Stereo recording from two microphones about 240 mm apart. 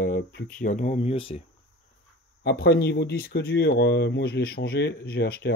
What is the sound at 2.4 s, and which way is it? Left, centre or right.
Speech, left.